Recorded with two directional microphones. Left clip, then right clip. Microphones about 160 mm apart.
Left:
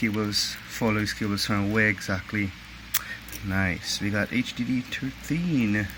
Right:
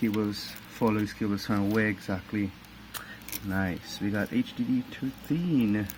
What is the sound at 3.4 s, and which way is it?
Speech, 15° left (ahead or behind).